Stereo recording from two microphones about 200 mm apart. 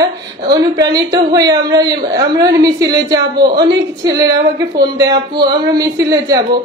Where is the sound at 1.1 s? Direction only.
20° right (ahead or behind).